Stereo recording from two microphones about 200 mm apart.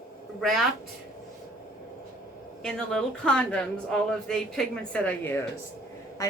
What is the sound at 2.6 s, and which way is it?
A woman's voice, 5° left (ahead or behind).